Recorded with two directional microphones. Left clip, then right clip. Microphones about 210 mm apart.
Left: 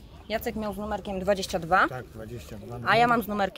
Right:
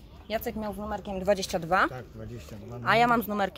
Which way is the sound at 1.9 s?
35° left (ahead or behind).